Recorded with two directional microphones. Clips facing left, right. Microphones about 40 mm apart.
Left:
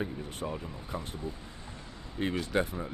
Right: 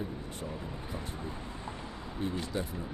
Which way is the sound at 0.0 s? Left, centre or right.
Left.